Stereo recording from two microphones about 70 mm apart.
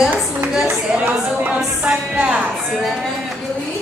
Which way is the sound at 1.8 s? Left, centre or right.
Centre.